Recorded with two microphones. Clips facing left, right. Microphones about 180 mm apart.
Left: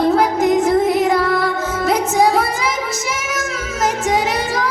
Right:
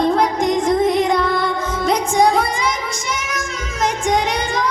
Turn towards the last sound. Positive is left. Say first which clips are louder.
# left 1 dB
turn(degrees=5)  # may be behind; listen again after turning